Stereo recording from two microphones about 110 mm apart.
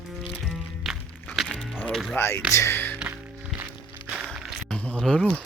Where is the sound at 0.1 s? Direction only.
Centre (ahead or behind).